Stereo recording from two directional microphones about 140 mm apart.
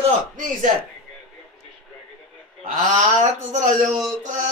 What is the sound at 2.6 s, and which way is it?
Speech, 65° right (ahead or behind).